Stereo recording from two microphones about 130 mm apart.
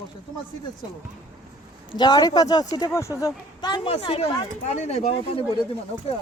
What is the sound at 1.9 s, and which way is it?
Speech, 35° left (ahead or behind).